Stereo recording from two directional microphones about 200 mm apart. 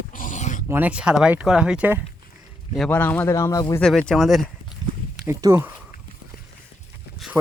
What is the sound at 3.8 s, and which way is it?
Speech, 5° left (ahead or behind).